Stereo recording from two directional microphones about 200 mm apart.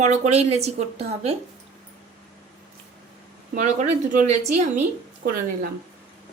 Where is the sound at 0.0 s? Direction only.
35° right (ahead or behind).